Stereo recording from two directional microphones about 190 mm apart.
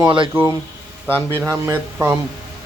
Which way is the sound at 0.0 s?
25° right (ahead or behind).